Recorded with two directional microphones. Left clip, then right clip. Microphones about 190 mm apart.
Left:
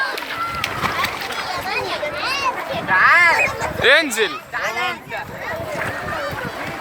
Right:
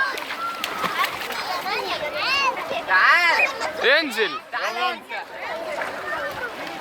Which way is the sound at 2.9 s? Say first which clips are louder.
Left 4 dB; 45° right (ahead or behind).